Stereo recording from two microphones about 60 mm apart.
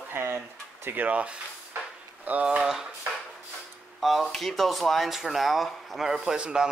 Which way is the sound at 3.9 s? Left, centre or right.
Centre.